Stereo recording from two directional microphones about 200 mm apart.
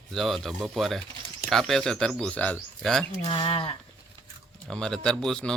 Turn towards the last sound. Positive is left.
turn(degrees=5)  # may be behind; listen again after turning